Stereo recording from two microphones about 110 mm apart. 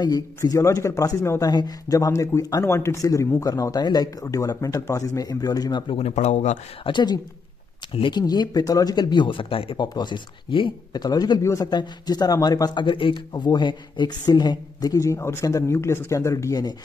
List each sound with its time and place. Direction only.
0.0 s speech: 35° left (ahead or behind)
5.9 s speech: 75° left (ahead or behind)
6.8 s speech: 45° left (ahead or behind)
9.8 s speech: 40° left (ahead or behind)
12.8 s speech: 50° left (ahead or behind)
13.3 s speech: 40° left (ahead or behind)